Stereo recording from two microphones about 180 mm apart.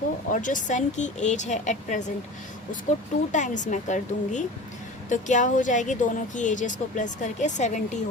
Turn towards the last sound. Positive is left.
turn(degrees=45)  # may be behind; listen again after turning